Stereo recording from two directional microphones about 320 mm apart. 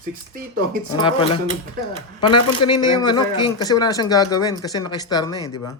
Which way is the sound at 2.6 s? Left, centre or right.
Centre.